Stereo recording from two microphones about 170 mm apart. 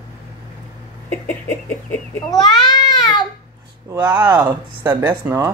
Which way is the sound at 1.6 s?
10° left (ahead or behind).